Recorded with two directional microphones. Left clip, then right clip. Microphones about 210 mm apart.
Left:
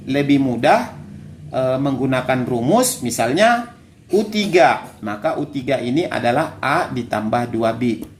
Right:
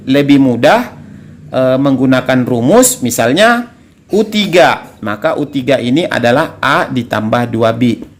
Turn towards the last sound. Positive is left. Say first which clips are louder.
# right 7 dB
turn(degrees=-50)  # may be behind; listen again after turning